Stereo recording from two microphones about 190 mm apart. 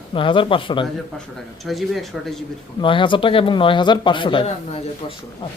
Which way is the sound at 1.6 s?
Centre (ahead or behind).